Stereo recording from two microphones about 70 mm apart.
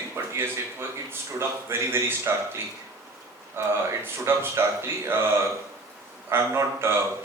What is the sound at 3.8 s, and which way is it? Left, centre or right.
Speech, right.